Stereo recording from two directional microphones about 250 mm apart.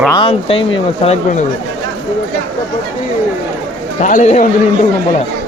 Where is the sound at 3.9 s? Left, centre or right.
Left.